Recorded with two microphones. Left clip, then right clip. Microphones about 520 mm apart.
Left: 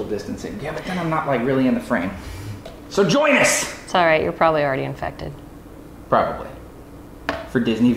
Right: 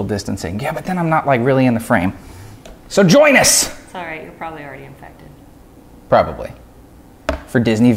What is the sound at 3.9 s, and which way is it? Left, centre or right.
A woman's voice, left.